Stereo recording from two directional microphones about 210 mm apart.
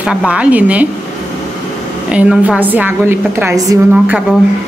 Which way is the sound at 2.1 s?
5° right (ahead or behind).